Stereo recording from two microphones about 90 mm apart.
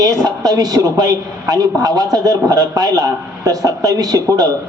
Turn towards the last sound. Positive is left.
turn(degrees=-45)  # may be behind; listen again after turning